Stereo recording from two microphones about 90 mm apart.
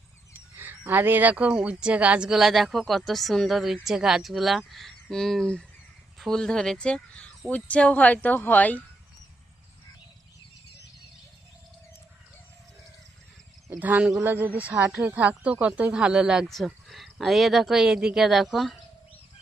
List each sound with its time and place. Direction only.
0.6 s speech: 20° right (ahead or behind); by 8.8 s 20° left (ahead or behind)
13.7 s speech: 20° right (ahead or behind); by 18.8 s centre (ahead or behind)